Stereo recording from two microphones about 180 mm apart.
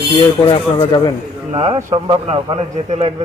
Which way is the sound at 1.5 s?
30° right (ahead or behind).